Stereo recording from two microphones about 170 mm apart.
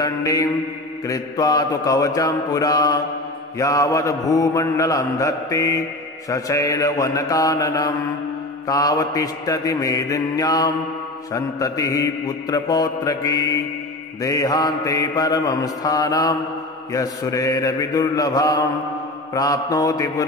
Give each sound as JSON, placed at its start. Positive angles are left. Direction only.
{"t": 0.0, "sound": "mantra", "side_deg": 20}